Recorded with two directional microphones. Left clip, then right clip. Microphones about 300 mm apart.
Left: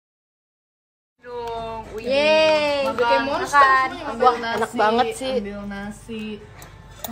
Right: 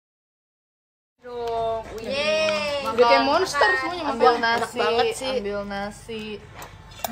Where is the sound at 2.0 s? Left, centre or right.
Left.